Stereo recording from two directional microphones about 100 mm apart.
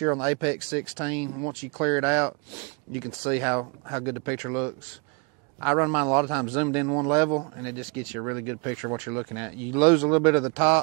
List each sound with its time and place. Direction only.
0.0 s a man's voice: 20° right (ahead or behind)